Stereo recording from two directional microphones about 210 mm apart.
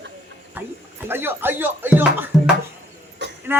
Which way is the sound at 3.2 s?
55° right (ahead or behind).